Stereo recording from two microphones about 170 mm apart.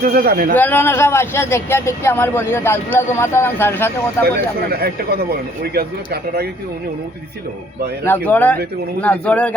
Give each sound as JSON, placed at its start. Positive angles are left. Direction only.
{"t": 0.0, "sound": "a man's voice", "side_deg": -60}
{"t": 0.5, "sound": "speech", "side_deg": 10}
{"t": 4.3, "sound": "speech", "side_deg": -65}
{"t": 8.0, "sound": "speech", "side_deg": 10}